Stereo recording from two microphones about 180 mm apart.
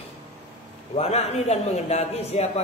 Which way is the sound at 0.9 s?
35° left (ahead or behind).